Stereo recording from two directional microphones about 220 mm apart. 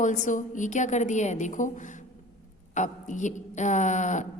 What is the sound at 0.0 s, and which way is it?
A woman's voice, 35° left (ahead or behind).